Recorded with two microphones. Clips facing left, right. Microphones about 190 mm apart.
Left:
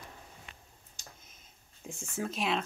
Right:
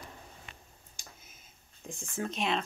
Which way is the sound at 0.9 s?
5° right (ahead or behind).